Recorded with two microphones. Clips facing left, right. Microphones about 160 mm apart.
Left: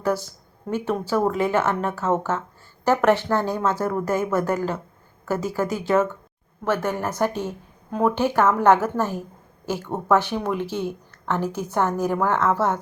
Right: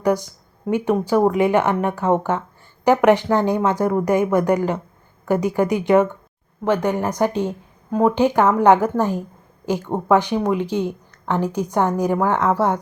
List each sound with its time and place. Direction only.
0.0 s speech: 15° right (ahead or behind)